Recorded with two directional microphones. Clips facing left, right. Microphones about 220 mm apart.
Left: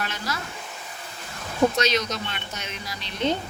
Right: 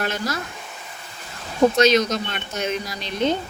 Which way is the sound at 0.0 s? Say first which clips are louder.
Right 6 dB; 45° right (ahead or behind).